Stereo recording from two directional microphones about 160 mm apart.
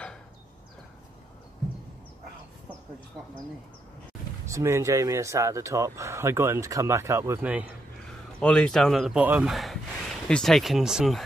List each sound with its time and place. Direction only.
4.5 s speech: 15° right (ahead or behind)
8.4 s speech: 5° left (ahead or behind)
9.2 s speech: 10° right (ahead or behind)
9.5 s speech: centre (ahead or behind)